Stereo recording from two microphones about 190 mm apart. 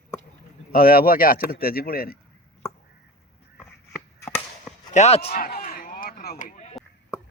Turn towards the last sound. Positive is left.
turn(degrees=40)  # may be behind; listen again after turning